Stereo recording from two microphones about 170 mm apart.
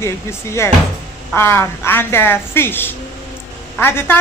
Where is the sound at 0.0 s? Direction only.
15° left (ahead or behind).